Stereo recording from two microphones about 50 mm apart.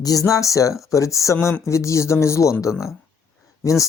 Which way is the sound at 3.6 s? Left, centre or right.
Left.